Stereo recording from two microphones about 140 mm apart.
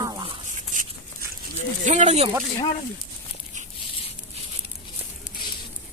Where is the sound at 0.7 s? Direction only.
70° right (ahead or behind).